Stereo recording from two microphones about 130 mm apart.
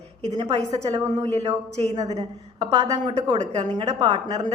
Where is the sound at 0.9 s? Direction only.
50° right (ahead or behind).